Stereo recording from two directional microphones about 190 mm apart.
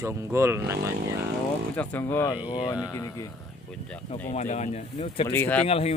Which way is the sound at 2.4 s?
25° left (ahead or behind).